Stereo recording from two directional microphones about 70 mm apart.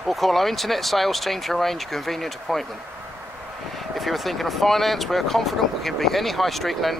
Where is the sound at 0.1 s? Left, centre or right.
Centre.